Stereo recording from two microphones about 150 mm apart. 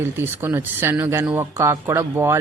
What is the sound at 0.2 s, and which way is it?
Speech, 15° right (ahead or behind).